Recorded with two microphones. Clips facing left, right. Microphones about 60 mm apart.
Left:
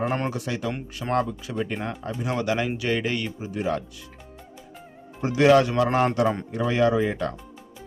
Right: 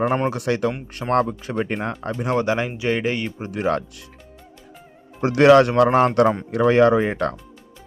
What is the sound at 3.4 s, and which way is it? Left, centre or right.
Speech, right.